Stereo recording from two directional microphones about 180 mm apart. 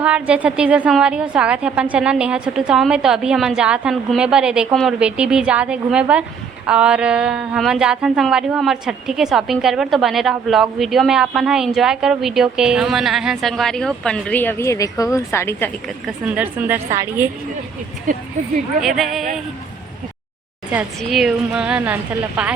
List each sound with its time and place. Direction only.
0.0 s a woman's voice: 10° right (ahead or behind); by 15.7 s 15° left (ahead or behind)
16.0 s a woman's voice: 10° right (ahead or behind)
18.1 s speech: 45° right (ahead or behind)
18.8 s a woman's voice: centre (ahead or behind)
20.7 s a woman's voice: 5° right (ahead or behind)